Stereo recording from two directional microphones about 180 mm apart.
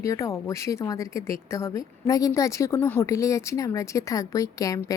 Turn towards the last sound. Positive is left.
turn(degrees=20)  # may be behind; listen again after turning